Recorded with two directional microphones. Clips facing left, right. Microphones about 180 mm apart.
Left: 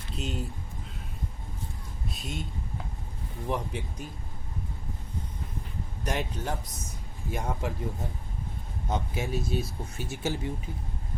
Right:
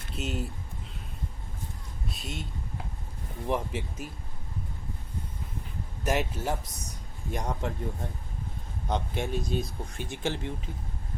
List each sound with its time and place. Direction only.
0.2 s speech: centre (ahead or behind)
2.0 s a sound: centre (ahead or behind)
3.5 s speech: centre (ahead or behind)
6.1 s speech: 5° right (ahead or behind)
8.9 s speech: 5° left (ahead or behind)